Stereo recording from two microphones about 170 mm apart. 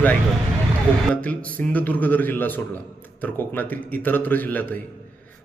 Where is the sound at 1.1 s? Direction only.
10° left (ahead or behind).